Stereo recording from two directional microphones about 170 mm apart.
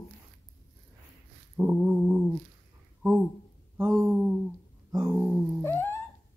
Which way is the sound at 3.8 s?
5° left (ahead or behind).